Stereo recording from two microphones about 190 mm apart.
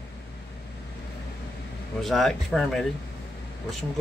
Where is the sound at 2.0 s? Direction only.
Centre (ahead or behind).